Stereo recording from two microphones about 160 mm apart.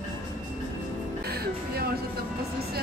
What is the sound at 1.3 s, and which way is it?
Music, 75° right (ahead or behind).